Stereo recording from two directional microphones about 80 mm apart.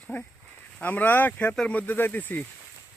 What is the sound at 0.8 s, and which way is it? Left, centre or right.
Speech, left.